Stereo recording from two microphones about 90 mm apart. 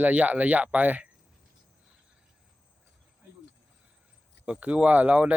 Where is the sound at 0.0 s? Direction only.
15° right (ahead or behind).